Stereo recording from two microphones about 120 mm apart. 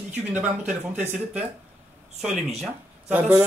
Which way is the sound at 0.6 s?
80° right.